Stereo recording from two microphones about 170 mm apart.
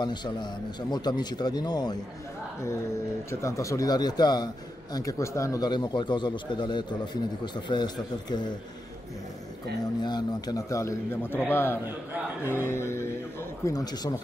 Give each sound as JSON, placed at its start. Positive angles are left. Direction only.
{"t": 0.0, "sound": "a man's voice", "side_deg": 25}
{"t": 3.3, "sound": "a man's voice", "side_deg": 15}
{"t": 10.0, "sound": "a man's voice", "side_deg": 25}